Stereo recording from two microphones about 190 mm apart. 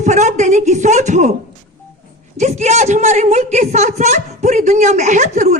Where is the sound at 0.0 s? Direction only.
40° right (ahead or behind).